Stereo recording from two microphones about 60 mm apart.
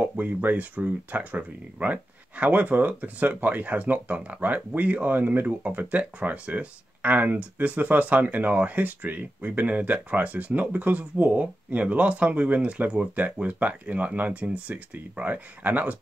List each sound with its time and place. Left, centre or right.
0.0 s speech: right
5.6 s speech: right